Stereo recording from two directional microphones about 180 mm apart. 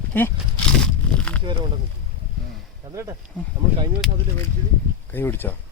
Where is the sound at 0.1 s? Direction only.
10° left (ahead or behind).